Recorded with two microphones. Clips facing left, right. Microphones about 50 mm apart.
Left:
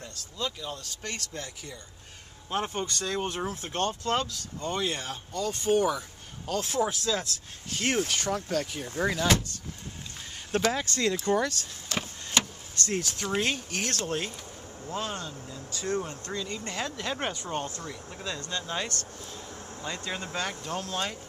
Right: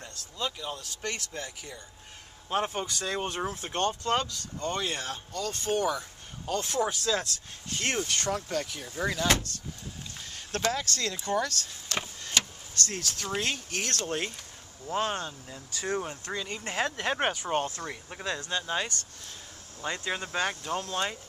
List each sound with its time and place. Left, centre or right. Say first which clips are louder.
0.4 s speech: even; centre
10.7 s speech: left 3 dB; centre
11.9 s vehicle: even; centre
12.4 s speech: left 1 dB; centre
14.9 s speech: right 4 dB; right
15.9 s speech: left 1 dB; centre
18.4 s speech: right 1 dB; centre
19.8 s speech: right 3 dB; right
20.6 s speech: right 1 dB; centre